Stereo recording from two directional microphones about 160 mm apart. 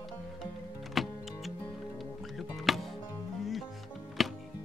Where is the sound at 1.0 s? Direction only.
Centre (ahead or behind).